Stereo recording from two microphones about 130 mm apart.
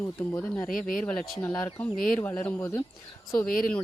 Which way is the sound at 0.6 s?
5° left (ahead or behind).